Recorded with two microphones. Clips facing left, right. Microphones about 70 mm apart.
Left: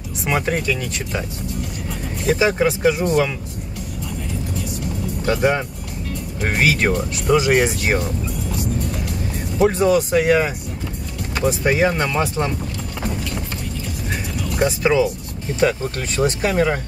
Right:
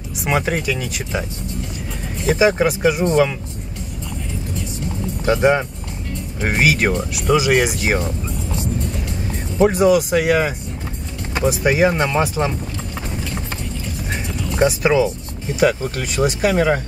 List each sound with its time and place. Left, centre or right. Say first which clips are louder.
0.2 s speech: right 1 dB; centre
2.2 s speech: right 2 dB; centre
5.2 s speech: right 3 dB; centre
8.0 s music: even; right
9.6 s speech: right 2 dB; centre
14.8 s speech: right 1 dB; centre